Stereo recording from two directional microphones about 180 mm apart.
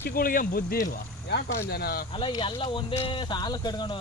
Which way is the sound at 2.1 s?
30° left (ahead or behind).